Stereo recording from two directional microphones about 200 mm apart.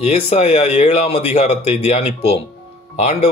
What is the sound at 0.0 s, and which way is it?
Speech, 35° left (ahead or behind).